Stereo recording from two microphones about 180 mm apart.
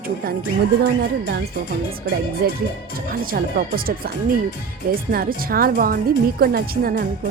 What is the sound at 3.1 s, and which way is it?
Speech, 55° right (ahead or behind).